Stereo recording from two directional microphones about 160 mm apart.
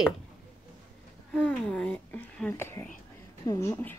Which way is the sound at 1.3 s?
5° left (ahead or behind).